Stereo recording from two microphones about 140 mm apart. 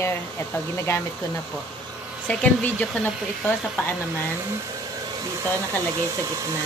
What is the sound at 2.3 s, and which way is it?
Speech, 10° left (ahead or behind).